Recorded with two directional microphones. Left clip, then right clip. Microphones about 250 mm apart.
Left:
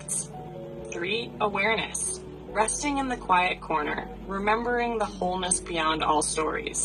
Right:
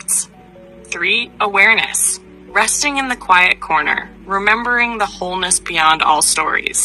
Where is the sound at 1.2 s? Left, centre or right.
Right.